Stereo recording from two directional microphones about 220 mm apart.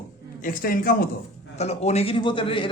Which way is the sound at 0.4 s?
40° left (ahead or behind).